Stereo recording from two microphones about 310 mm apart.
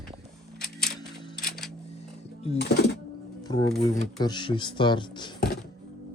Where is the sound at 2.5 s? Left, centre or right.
Left.